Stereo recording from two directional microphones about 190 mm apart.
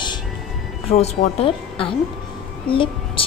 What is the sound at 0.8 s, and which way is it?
A woman's voice, 35° left (ahead or behind).